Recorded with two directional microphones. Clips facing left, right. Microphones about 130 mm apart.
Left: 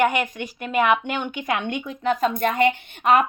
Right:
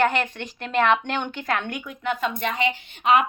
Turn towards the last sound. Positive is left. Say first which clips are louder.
# left 1 dB
turn(degrees=50)  # may be behind; listen again after turning